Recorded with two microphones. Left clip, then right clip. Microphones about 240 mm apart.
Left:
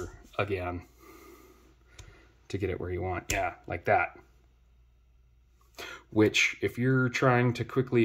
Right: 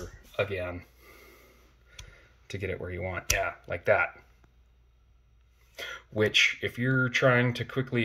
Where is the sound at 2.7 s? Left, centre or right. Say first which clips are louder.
Left 1 dB; left.